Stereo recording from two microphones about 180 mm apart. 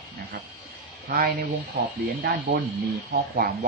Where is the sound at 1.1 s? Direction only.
50° right (ahead or behind).